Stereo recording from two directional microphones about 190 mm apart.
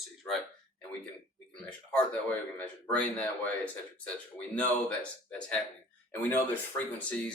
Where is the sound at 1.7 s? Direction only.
5° left (ahead or behind).